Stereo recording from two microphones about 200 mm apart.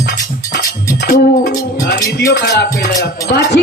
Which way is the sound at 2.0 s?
15° left (ahead or behind).